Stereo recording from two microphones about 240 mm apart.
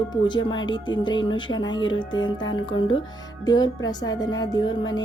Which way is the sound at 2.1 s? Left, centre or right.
Left.